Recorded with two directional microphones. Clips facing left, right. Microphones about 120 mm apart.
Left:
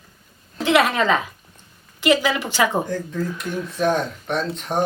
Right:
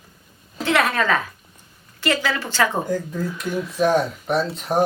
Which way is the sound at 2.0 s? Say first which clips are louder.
Left 4 dB; 15° left (ahead or behind).